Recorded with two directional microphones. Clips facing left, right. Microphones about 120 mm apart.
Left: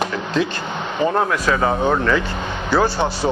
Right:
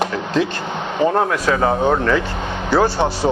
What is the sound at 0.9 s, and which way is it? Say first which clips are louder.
A man's voice: right 2 dB; 35° right (ahead or behind).